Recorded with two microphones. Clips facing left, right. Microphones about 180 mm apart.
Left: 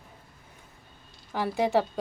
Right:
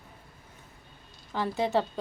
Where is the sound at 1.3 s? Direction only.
10° left (ahead or behind).